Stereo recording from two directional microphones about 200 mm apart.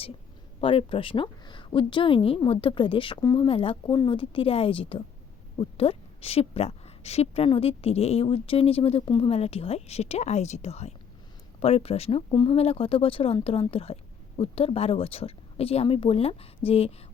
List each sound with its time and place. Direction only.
0.6 s a woman's voice: 25° left (ahead or behind)